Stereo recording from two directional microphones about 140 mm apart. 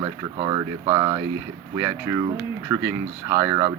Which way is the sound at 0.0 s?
25° right (ahead or behind).